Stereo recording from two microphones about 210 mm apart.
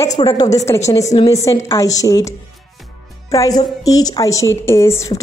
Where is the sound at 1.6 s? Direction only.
15° left (ahead or behind).